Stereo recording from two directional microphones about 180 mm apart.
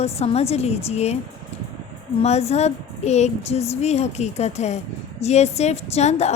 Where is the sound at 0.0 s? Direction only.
35° left (ahead or behind).